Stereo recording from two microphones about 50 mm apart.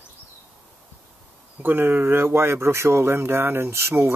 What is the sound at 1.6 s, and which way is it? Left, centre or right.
Speech, right.